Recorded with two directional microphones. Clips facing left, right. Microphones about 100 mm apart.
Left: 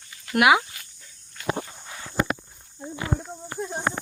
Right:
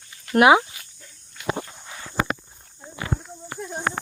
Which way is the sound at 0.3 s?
30° right (ahead or behind).